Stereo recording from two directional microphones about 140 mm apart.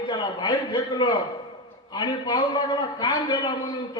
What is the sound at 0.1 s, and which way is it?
A man's voice, 35° left (ahead or behind).